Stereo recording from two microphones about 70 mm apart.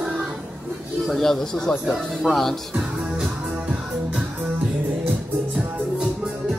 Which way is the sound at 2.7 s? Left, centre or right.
Centre.